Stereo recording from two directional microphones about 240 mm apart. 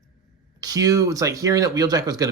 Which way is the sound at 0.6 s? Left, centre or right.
Centre.